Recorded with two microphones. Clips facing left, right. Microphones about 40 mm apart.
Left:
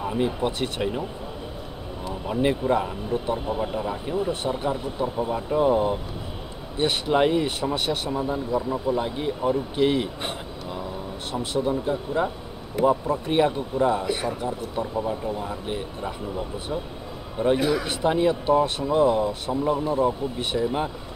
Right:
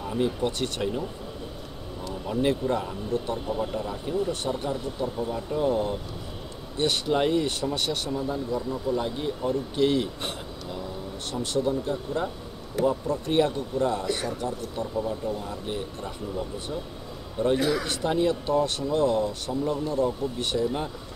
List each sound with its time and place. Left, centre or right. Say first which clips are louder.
0.0 s speech: left 2 dB; left
2.0 s a man's voice: left 2 dB; left